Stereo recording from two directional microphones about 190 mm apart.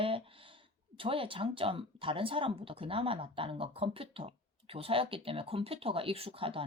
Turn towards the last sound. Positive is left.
turn(degrees=-30)  # may be behind; listen again after turning